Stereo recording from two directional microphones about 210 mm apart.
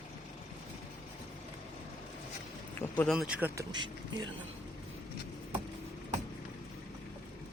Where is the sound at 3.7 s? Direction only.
20° right (ahead or behind).